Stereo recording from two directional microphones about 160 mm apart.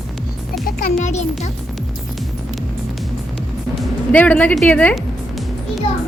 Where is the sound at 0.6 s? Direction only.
55° left (ahead or behind).